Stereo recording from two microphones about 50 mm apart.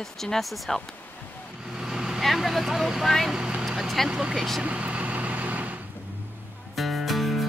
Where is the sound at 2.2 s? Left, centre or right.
Centre.